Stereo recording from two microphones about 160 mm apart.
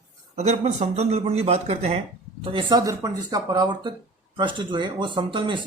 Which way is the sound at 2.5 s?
25° right (ahead or behind).